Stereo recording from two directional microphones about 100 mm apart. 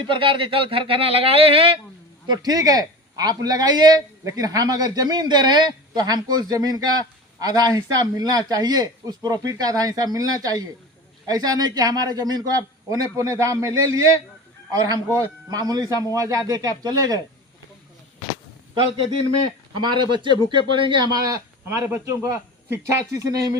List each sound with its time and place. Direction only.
0.0 s speech: 60° right (ahead or behind)
2.2 s a man's voice: 45° right (ahead or behind)
19.8 s a man's voice: 50° right (ahead or behind)
21.0 s speech: 40° right (ahead or behind)